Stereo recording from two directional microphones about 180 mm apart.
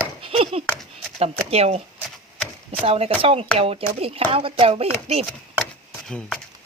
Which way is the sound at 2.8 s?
30° right (ahead or behind).